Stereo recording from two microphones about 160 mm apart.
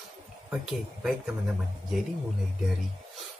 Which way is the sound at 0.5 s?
5° right (ahead or behind).